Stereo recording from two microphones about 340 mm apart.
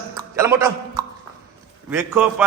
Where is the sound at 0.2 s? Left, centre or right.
Centre.